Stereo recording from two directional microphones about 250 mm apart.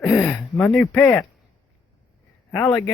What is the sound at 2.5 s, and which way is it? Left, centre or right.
Speech, centre.